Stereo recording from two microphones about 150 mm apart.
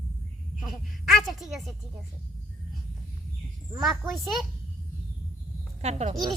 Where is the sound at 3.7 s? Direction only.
Centre (ahead or behind).